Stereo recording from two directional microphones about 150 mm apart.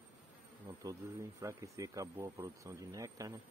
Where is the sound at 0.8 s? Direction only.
20° right (ahead or behind).